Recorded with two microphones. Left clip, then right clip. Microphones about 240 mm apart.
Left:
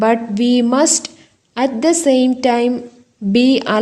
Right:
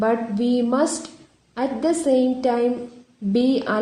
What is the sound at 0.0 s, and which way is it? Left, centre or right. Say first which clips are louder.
A woman's voice: left 6 dB; left.